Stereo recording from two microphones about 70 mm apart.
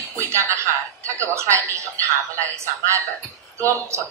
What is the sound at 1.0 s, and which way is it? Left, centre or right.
Speech, right.